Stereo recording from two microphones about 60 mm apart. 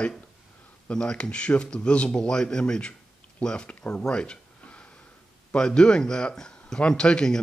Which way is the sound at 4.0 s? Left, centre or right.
Centre.